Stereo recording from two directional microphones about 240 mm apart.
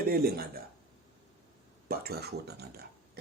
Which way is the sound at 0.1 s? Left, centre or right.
Right.